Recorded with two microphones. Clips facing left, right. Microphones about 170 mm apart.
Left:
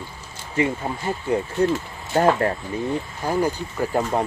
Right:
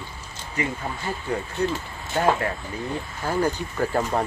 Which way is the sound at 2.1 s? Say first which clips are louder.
Left 4 dB; 35° left (ahead or behind).